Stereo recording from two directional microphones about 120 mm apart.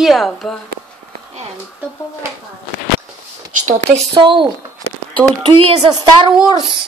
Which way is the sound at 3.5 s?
90° right.